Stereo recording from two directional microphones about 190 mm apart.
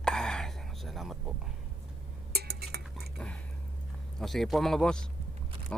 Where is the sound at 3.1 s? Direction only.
5° left (ahead or behind).